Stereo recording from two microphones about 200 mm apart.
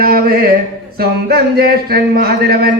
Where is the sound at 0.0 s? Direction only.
45° right (ahead or behind).